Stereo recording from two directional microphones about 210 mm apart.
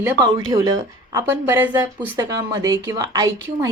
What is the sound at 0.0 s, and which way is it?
A woman's voice, 15° right (ahead or behind).